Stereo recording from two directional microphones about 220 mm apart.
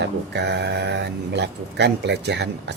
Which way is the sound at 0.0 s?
50° right (ahead or behind).